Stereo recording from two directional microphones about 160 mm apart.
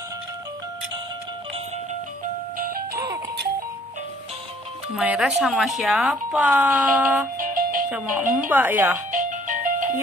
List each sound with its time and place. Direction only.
4.9 s speech: 5° right (ahead or behind)
7.3 s music: 55° right (ahead or behind)
7.9 s speech: 15° right (ahead or behind)
9.1 s music: 55° right (ahead or behind)